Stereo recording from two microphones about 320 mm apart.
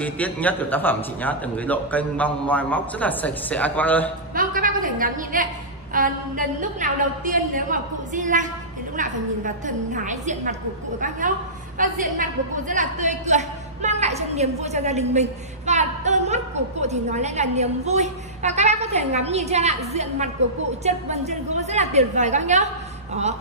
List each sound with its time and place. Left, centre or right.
0.0 s a man's voice: centre
4.4 s a woman's voice: right